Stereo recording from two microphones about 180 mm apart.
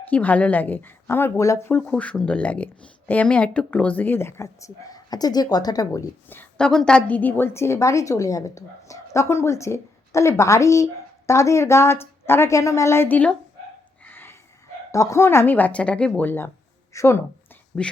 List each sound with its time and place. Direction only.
0.1 s a woman's voice: 10° left (ahead or behind)
14.0 s a sound: 10° left (ahead or behind)
14.9 s a woman's voice: 15° left (ahead or behind)